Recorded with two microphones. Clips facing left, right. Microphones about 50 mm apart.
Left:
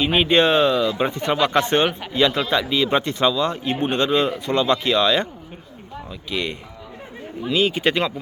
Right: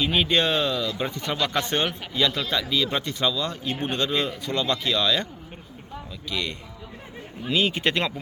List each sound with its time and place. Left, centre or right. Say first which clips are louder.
0.0 s a man's voice: left 5 dB; left
6.3 s speech: left 4 dB; left
7.5 s speech: left 4 dB; centre